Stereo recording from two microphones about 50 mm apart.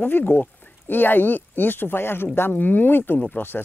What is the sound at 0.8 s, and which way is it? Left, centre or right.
Speech, left.